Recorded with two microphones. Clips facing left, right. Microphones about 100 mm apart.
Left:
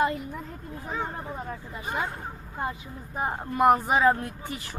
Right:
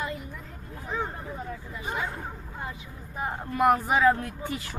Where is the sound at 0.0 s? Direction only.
55° left (ahead or behind).